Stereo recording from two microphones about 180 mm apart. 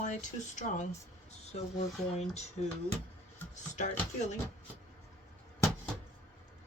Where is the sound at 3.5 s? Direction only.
40° left (ahead or behind).